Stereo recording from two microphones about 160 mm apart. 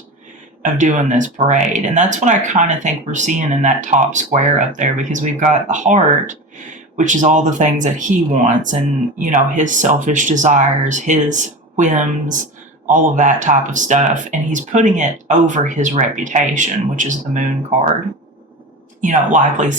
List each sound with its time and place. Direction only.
0.6 s speech: 50° right (ahead or behind)
19.0 s speech: 50° right (ahead or behind)